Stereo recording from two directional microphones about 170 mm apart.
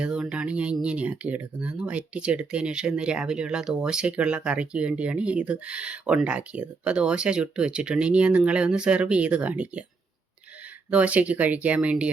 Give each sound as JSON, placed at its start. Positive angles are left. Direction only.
{"t": 0.0, "sound": "speech", "side_deg": -5}
{"t": 10.9, "sound": "speech", "side_deg": -10}